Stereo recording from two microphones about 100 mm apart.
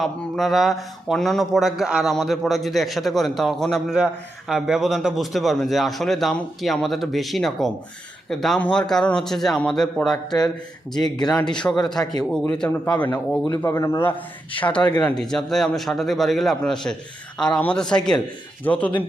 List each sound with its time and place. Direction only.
0.0 s speech: centre (ahead or behind)
3.9 s speech: 5° right (ahead or behind)
10.9 s speech: 45° left (ahead or behind)
11.5 s speech: 10° left (ahead or behind)
13.7 s speech: 30° left (ahead or behind)
14.6 s speech: 10° left (ahead or behind)